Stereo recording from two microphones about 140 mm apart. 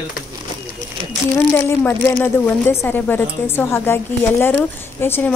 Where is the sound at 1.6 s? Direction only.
15° left (ahead or behind).